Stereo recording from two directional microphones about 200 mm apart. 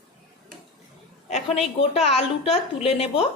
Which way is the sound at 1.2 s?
35° left (ahead or behind).